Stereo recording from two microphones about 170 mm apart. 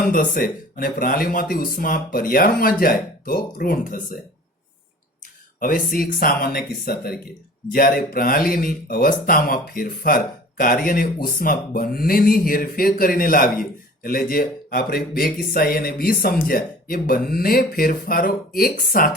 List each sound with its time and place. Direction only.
0.1 s speech: 55° left (ahead or behind)
5.5 s speech: 55° left (ahead or behind)